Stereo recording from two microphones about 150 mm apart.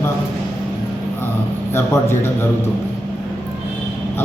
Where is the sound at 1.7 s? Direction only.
15° left (ahead or behind).